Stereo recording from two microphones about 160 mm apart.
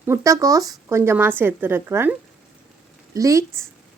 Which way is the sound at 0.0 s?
20° right (ahead or behind).